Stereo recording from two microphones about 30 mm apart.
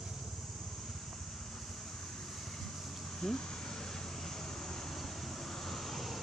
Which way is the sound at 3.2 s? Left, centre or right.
Centre.